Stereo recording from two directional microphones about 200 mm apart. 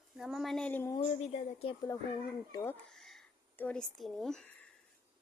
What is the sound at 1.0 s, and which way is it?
Speech, 35° left (ahead or behind).